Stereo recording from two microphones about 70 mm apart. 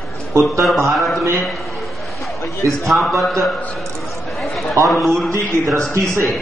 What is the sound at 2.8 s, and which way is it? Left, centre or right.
Speech, centre.